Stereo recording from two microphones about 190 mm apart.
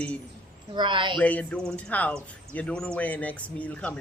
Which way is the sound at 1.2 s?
10° left (ahead or behind).